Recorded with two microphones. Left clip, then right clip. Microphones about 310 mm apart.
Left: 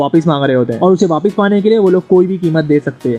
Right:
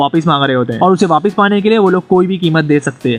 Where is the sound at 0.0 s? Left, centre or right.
Centre.